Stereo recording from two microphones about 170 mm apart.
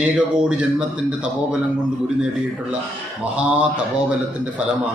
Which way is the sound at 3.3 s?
10° right (ahead or behind).